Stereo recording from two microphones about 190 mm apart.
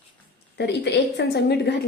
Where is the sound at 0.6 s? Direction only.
65° left (ahead or behind).